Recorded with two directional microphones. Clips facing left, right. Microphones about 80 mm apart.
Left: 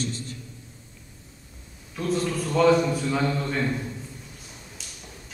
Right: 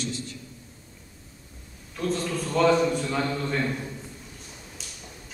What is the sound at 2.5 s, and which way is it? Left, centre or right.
Speech, centre.